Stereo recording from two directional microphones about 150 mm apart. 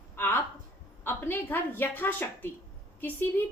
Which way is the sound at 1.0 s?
15° left (ahead or behind).